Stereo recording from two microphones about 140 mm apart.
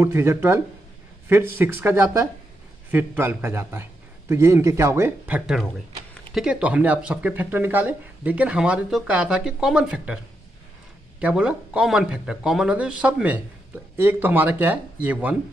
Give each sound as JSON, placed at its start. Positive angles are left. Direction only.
{"t": 0.0, "sound": "speech", "side_deg": -20}
{"t": 11.1, "sound": "speech", "side_deg": -5}